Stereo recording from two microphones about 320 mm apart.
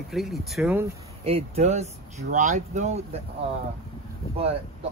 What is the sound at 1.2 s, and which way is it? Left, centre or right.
Speech, centre.